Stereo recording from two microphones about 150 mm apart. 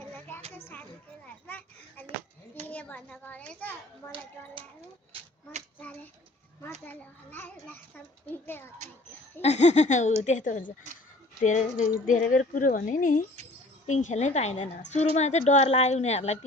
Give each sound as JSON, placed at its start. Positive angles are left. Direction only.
{"t": 0.5, "sound": "a sound", "side_deg": 10}
{"t": 2.6, "sound": "a child's voice", "side_deg": 10}
{"t": 5.1, "sound": "a sound", "side_deg": -50}
{"t": 6.8, "sound": "a child's voice", "side_deg": 10}
{"t": 9.4, "sound": "speech", "side_deg": 50}
{"t": 12.0, "sound": "speech", "side_deg": 65}